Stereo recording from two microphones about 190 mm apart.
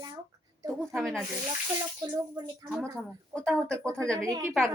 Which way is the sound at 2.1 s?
20° right (ahead or behind).